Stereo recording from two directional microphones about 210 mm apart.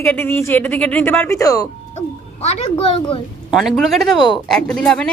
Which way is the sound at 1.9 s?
30° left (ahead or behind).